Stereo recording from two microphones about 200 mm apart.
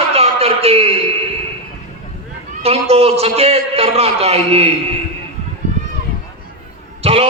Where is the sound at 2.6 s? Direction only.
30° right (ahead or behind).